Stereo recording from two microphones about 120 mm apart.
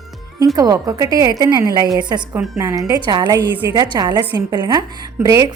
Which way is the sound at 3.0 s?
40° right (ahead or behind).